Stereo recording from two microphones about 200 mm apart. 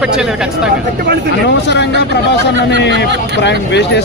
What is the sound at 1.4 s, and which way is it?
Speech, 60° left (ahead or behind).